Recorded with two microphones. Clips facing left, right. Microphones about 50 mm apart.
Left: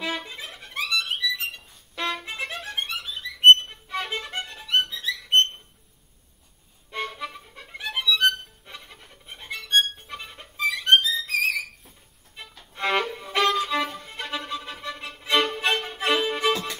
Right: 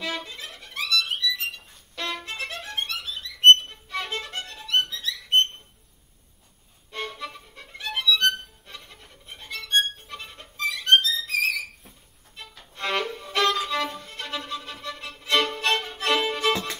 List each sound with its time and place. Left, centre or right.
0.0 s music: centre
2.0 s music: centre
3.5 s violin: centre
6.9 s music: centre
12.4 s violin: centre